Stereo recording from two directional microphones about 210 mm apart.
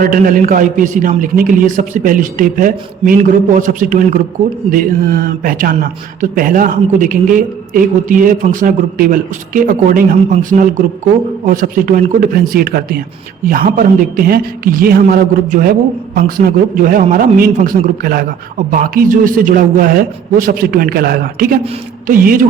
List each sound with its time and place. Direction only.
0.0 s a man's voice: 40° right (ahead or behind)